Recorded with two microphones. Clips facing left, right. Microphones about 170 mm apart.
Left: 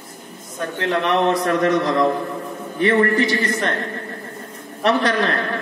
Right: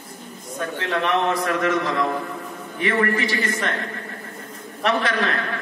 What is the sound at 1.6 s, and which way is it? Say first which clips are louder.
A man's voice: left 4 dB; 35° left (ahead or behind).